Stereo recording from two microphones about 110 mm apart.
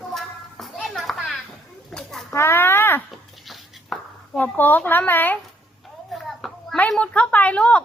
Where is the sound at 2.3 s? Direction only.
20° left (ahead or behind).